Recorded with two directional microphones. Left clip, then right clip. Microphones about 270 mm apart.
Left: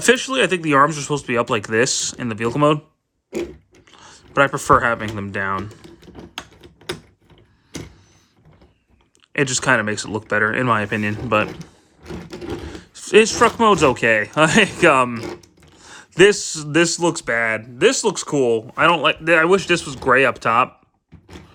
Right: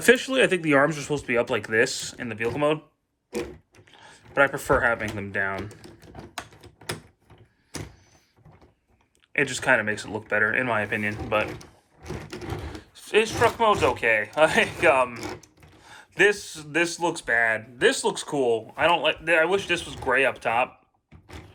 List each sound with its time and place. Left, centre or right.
0.0 s speech: centre
3.9 s speech: centre
9.3 s speech: centre